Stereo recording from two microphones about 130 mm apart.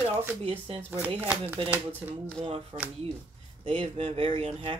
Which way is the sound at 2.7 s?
45° right (ahead or behind).